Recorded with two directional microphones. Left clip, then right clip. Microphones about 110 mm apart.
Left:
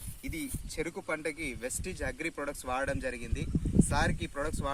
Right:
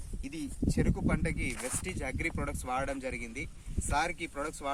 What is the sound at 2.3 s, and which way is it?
Speech, 40° right (ahead or behind).